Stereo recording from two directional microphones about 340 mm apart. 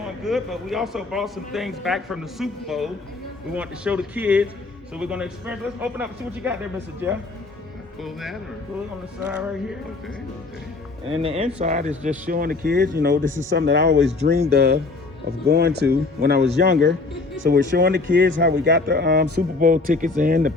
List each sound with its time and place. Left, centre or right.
0.3 s a man's voice: centre
11.0 s speech: centre